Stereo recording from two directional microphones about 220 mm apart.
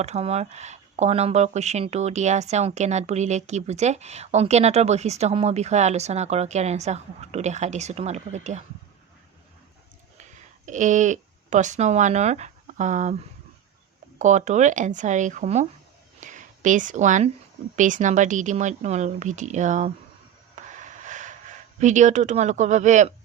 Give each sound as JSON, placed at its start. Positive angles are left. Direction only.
{"t": 0.0, "sound": "speech", "side_deg": -30}
{"t": 10.7, "sound": "speech", "side_deg": -35}
{"t": 14.2, "sound": "speech", "side_deg": -35}
{"t": 20.7, "sound": "a sound", "side_deg": -35}